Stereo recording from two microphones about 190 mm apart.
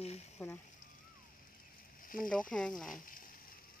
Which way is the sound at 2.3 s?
5° left (ahead or behind).